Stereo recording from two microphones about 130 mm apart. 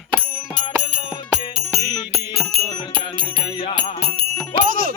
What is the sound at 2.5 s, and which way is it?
Music, 50° right (ahead or behind).